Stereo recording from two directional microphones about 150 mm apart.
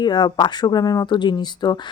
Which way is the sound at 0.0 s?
30° left (ahead or behind).